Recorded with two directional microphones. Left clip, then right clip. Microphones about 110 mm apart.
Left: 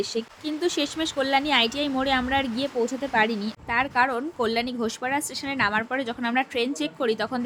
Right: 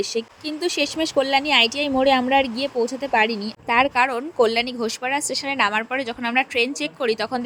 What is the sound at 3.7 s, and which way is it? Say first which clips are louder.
A woman's voice: right 5 dB; 50° right (ahead or behind).